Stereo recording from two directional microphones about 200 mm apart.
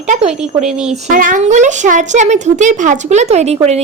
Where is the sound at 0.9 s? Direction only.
40° right (ahead or behind).